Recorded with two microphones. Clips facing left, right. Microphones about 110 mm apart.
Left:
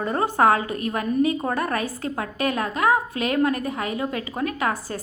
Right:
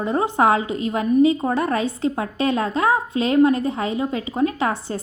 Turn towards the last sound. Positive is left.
turn(degrees=-25)  # may be behind; listen again after turning